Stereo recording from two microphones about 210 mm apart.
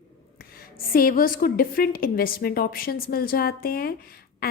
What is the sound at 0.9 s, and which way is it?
A woman's voice, 45° left (ahead or behind).